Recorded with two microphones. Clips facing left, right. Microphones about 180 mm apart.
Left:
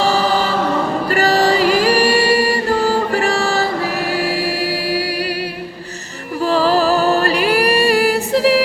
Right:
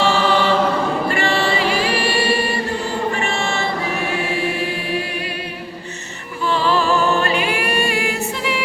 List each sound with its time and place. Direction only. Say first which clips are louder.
0.0 s choir: left 1 dB; 40° left (ahead or behind)
1.0 s music: left 5 dB; 40° left (ahead or behind)
3.2 s choir: left 5 dB; 35° left (ahead or behind)
6.4 s music: left 4 dB; 40° left (ahead or behind)